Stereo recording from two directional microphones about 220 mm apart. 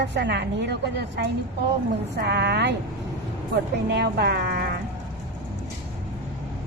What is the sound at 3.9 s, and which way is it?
Speech, 45° right (ahead or behind).